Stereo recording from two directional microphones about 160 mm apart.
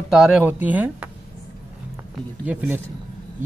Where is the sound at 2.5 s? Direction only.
10° right (ahead or behind).